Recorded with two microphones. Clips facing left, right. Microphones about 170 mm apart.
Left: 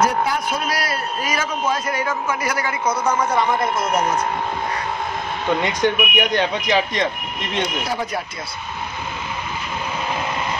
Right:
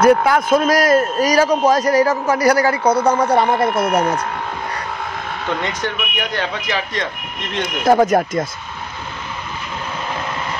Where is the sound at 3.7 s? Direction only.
60° right (ahead or behind).